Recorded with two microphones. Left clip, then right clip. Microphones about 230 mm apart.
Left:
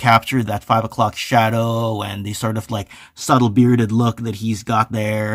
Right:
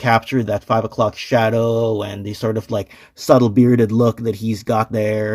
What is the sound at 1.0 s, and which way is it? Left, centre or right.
Speech, left.